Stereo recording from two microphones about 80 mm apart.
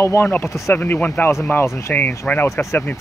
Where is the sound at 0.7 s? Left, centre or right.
Left.